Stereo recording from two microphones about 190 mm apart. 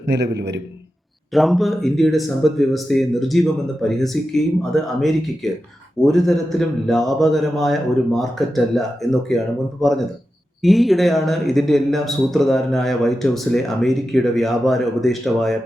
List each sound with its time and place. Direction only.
0.1 s a man's voice: 65° right (ahead or behind)
1.3 s speech: centre (ahead or behind)